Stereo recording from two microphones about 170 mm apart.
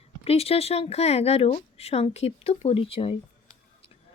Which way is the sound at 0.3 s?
35° left (ahead or behind).